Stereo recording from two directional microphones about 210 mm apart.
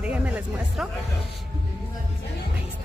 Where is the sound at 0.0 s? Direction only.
5° right (ahead or behind).